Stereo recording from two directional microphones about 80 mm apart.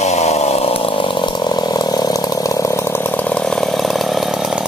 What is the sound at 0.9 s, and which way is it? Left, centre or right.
Vehicle, left.